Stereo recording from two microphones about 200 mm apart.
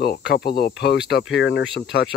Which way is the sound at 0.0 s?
55° left (ahead or behind).